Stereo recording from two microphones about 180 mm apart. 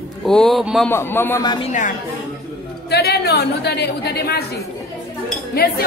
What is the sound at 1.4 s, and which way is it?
Speech, 25° left (ahead or behind).